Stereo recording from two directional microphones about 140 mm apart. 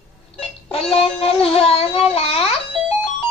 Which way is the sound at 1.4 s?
45° left (ahead or behind).